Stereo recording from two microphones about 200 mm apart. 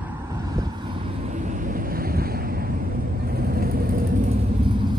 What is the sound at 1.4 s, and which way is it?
Vehicle, 40° right (ahead or behind).